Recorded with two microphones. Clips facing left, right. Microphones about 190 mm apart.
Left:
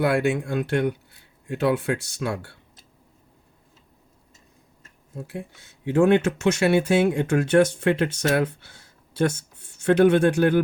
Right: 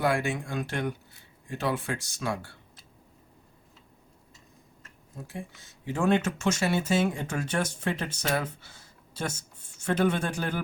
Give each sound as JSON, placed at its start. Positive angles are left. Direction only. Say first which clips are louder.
{"t": 0.0, "sound": "speech", "louder": "left 6 dB", "side_deg": 65}
{"t": 5.1, "sound": "speech", "louder": "left 5 dB", "side_deg": 65}